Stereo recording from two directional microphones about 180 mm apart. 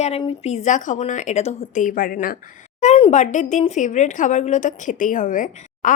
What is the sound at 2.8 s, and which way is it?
Speech, 35° left (ahead or behind).